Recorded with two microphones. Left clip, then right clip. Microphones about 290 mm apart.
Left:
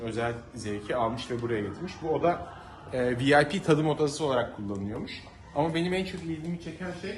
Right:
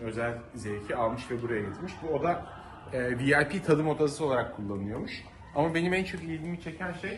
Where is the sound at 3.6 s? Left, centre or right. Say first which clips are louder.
Left 1 dB; centre.